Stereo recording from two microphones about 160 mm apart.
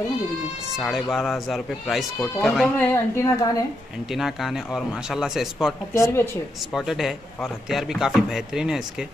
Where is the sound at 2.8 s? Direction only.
15° left (ahead or behind).